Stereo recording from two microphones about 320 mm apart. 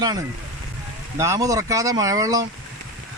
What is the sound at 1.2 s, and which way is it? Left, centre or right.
Speech, centre.